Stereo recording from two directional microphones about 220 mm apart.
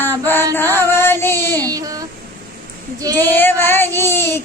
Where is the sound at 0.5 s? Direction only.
10° left (ahead or behind).